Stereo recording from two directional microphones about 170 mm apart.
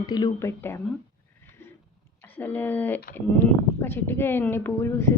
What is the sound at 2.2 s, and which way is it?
A woman's voice, 10° left (ahead or behind).